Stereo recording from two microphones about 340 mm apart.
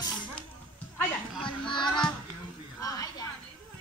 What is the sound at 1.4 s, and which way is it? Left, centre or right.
Music, centre.